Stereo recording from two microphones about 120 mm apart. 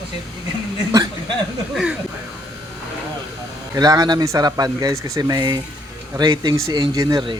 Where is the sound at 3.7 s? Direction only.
35° right (ahead or behind).